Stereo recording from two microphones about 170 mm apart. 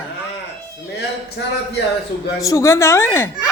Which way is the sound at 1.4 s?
90° left.